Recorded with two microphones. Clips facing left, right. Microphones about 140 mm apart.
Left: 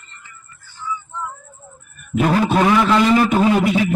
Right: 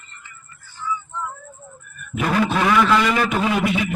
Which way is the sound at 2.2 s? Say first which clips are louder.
Left 3 dB; 35° left (ahead or behind).